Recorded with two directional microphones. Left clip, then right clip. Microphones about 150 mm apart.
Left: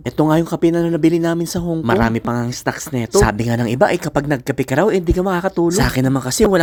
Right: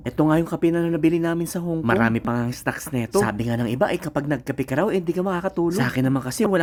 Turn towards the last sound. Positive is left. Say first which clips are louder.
# left 6 dB
turn(degrees=30)  # may be behind; listen again after turning